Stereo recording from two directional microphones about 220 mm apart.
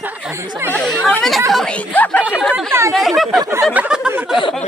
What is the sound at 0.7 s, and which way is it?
A woman's voice, centre (ahead or behind).